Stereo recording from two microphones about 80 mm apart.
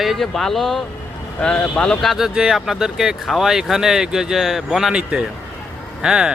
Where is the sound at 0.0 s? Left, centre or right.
Centre.